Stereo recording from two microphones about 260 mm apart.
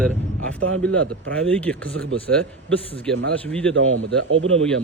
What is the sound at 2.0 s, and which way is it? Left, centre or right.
Speech, right.